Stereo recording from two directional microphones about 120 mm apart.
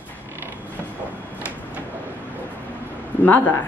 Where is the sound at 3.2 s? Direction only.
15° left (ahead or behind).